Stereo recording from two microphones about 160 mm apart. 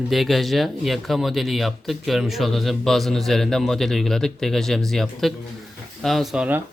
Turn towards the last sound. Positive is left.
turn(degrees=-10)  # may be behind; listen again after turning